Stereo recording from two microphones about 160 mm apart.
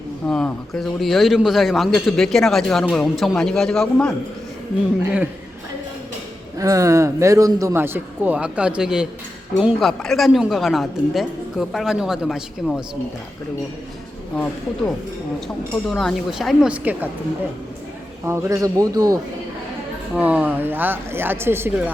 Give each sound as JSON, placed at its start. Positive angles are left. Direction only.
{"t": 0.3, "sound": "a woman's voice", "side_deg": 5}
{"t": 6.6, "sound": "a man's voice", "side_deg": -20}
{"t": 15.9, "sound": "a woman's voice", "side_deg": 0}
{"t": 18.3, "sound": "a man's voice", "side_deg": -20}
{"t": 20.1, "sound": "a man's voice", "side_deg": -10}